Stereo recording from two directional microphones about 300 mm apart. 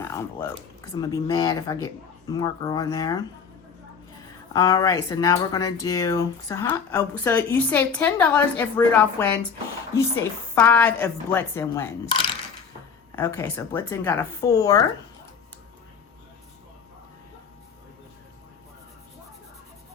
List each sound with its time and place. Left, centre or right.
0.9 s speech: centre
4.5 s speech: centre